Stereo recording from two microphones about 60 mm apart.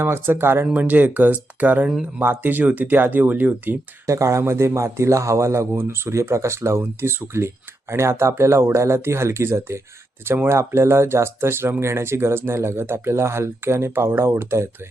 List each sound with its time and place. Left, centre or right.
0.0 s speech: right
0.7 s speech: right
4.0 s speech: right